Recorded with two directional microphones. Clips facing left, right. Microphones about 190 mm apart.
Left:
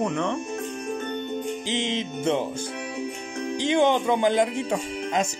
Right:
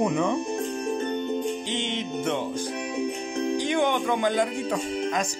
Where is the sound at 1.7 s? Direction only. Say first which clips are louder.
Left 2 dB; 90° left.